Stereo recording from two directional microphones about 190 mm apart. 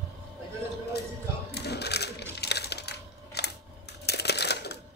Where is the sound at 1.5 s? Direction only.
60° left (ahead or behind).